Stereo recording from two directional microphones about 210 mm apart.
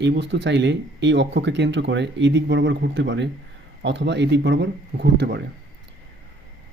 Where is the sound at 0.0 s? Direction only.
55° right (ahead or behind).